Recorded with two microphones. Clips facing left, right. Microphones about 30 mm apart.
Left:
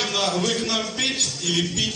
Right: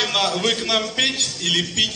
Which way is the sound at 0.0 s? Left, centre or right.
Right.